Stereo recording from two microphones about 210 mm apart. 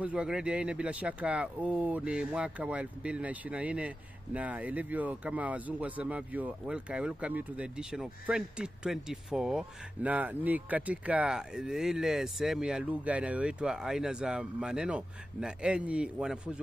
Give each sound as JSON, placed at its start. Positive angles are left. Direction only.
{"t": 0.0, "sound": "speech", "side_deg": -5}